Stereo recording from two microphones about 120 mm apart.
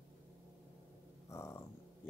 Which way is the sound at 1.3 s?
20° left (ahead or behind).